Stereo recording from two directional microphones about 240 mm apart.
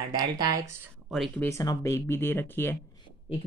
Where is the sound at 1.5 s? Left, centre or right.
Centre.